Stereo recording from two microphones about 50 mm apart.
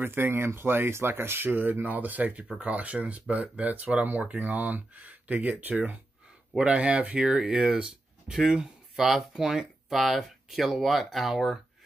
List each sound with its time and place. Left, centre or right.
0.0 s speech: right
6.6 s speech: right; by 11.6 s centre